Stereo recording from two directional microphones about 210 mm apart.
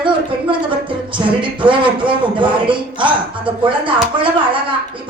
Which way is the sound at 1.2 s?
25° right (ahead or behind).